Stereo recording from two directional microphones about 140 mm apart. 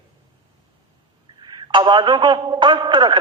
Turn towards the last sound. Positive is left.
turn(degrees=-35)  # may be behind; listen again after turning